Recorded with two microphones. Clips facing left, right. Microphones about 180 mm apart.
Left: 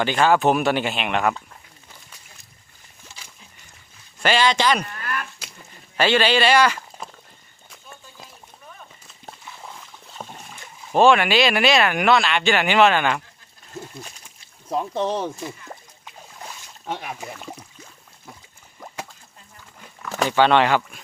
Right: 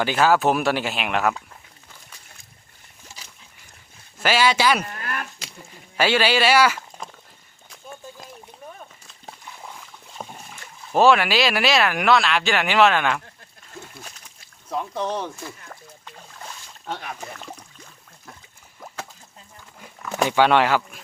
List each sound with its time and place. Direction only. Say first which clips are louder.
0.0 s speech: left 1 dB; 5° right (ahead or behind)
4.2 s speech: even; 5° right (ahead or behind)
4.9 s livestock: left 1 dB; 40° right (ahead or behind)
6.0 s speech: left 1 dB; 10° right (ahead or behind)
9.0 s a sound: even; centre (ahead or behind)
10.9 s speech: left 1 dB; 5° right (ahead or behind)
14.7 s speech: left 3 dB; 30° left (ahead or behind)
15.2 s boat: left 4 dB; 20° left (ahead or behind)
20.1 s speech: even; 15° right (ahead or behind)